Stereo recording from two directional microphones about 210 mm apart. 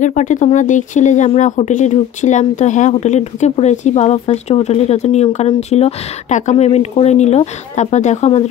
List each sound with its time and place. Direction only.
0.0 s speech: 35° left (ahead or behind)